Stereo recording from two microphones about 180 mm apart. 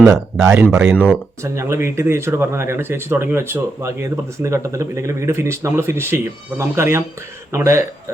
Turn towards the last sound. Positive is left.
turn(degrees=-15)  # may be behind; listen again after turning